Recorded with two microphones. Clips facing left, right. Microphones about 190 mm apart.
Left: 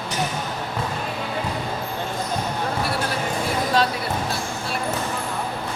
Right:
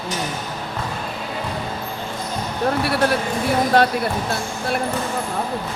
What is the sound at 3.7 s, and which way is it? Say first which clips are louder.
Speech: right 4 dB; 60° right (ahead or behind).